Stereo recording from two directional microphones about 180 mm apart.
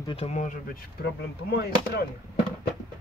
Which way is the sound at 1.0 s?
65° left (ahead or behind).